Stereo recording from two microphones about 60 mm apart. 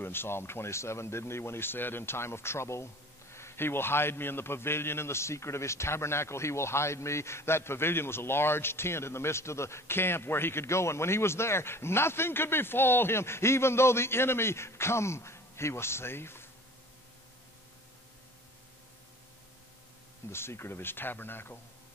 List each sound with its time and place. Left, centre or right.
0.0 s speech: left
20.2 s speech: left